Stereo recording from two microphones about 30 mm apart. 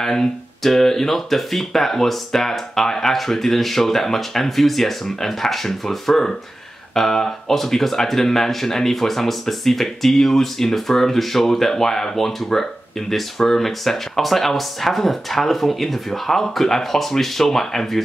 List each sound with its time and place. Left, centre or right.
0.0 s speech: centre